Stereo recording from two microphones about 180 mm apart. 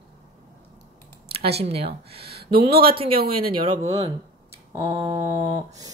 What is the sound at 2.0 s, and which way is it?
Speech, 60° right (ahead or behind).